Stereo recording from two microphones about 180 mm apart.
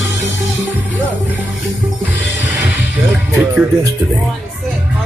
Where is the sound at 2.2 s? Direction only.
10° right (ahead or behind).